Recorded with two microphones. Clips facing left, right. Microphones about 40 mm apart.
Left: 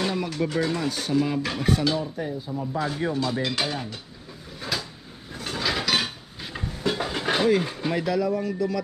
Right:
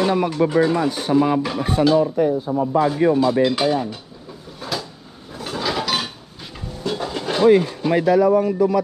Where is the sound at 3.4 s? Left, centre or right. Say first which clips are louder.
Right 9 dB; centre.